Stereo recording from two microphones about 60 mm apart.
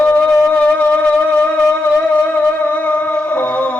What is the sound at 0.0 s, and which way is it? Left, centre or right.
Wind instrument, left.